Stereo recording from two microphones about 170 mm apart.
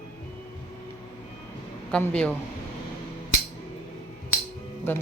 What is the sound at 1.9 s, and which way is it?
Speech, 5° left (ahead or behind).